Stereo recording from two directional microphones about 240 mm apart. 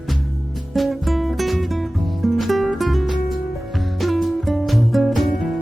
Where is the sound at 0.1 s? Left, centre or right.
Centre.